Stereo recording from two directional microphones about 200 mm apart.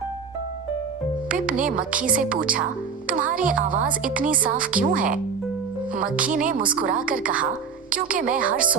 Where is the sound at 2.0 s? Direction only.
45° right (ahead or behind).